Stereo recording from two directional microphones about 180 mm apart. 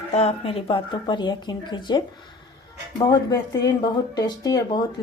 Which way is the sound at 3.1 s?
20° left (ahead or behind).